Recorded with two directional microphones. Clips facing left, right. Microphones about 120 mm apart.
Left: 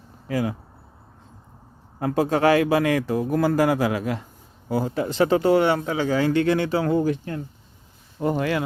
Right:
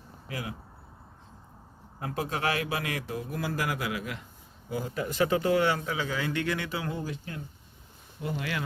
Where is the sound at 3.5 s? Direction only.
35° left (ahead or behind).